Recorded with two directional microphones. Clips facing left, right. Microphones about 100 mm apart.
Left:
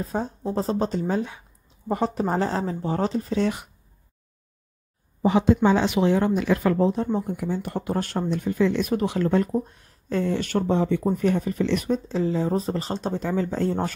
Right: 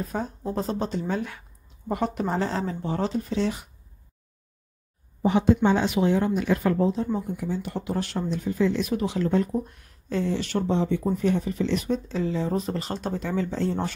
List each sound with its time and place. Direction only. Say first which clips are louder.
0.0 s speech: left 2 dB; 30° left (ahead or behind)
5.4 s speech: left 1 dB; 90° left; by 9.5 s 55° left (ahead or behind)
9.5 s speech: left 2 dB; 35° left (ahead or behind)
10.1 s speech: left 2 dB; 50° left (ahead or behind)
11.9 s speech: left 3 dB; 35° left (ahead or behind)